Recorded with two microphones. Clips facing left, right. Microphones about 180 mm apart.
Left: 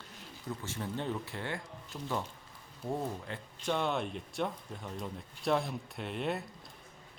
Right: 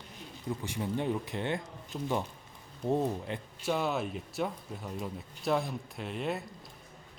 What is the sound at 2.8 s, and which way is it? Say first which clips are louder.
Speech: right 6 dB; 20° right (ahead or behind).